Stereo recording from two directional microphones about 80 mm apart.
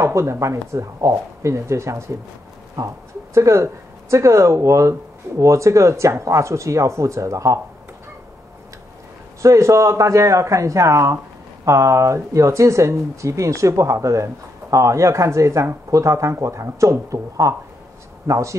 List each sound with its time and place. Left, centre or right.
0.0 s speech: right
3.3 s speech: right
9.4 s a man's voice: right